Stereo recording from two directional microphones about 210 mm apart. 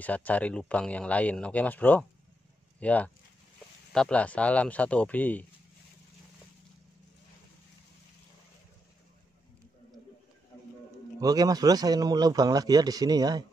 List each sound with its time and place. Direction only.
0.0 s speech: 5° left (ahead or behind)
11.1 s speech: 15° right (ahead or behind)